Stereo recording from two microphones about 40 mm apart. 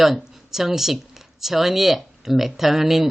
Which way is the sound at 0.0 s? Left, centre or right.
Centre.